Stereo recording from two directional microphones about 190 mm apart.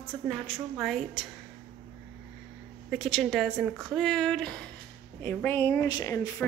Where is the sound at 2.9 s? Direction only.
Centre (ahead or behind); by 6.4 s 15° left (ahead or behind).